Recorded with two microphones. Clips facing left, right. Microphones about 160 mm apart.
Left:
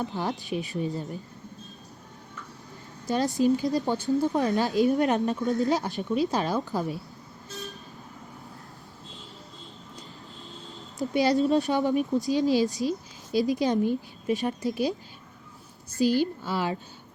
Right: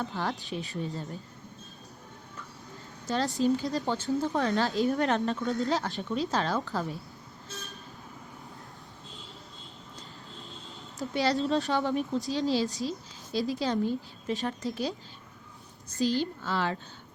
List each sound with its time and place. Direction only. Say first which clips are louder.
0.0 s speech: left 3 dB; 20° left (ahead or behind)
3.1 s speech: left 3 dB; 15° left (ahead or behind)
10.9 s speech: left 5 dB; 15° left (ahead or behind)